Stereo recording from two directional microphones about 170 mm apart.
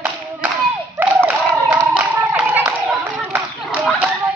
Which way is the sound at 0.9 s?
10° right (ahead or behind).